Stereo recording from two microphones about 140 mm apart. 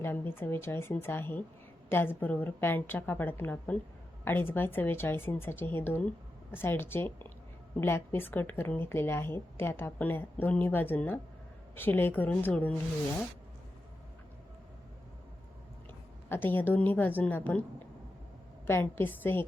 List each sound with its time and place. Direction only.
0.0 s a woman's voice: 15° left (ahead or behind)
16.3 s a woman's voice: 15° left (ahead or behind)